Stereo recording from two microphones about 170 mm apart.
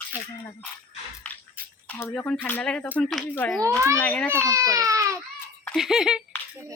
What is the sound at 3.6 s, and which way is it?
Speech, 15° right (ahead or behind).